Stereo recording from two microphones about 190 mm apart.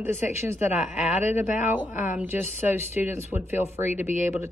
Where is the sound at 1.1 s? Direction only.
40° left (ahead or behind).